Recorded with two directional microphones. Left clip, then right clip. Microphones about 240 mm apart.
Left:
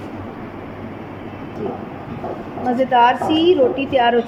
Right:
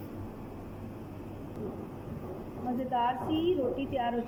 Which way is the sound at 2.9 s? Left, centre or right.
Left.